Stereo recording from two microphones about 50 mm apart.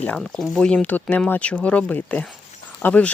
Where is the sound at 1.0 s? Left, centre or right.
Left.